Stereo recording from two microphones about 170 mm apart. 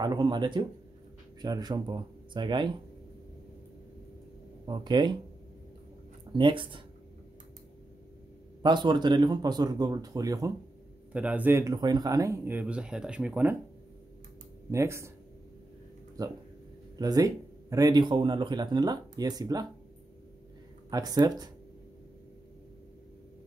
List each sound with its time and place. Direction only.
0.0 s speech: 25° right (ahead or behind)
4.6 s speech: 25° right (ahead or behind)
6.3 s speech: 30° right (ahead or behind)
8.6 s speech: 25° right (ahead or behind)
11.1 s speech: 10° right (ahead or behind)
14.7 s speech: 15° right (ahead or behind)
16.2 s speech: 20° right (ahead or behind)
20.9 s speech: 20° right (ahead or behind)